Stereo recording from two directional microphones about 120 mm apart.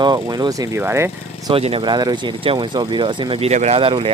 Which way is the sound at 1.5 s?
50° right (ahead or behind).